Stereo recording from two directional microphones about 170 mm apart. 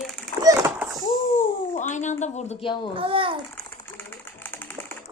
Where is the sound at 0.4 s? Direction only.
15° right (ahead or behind).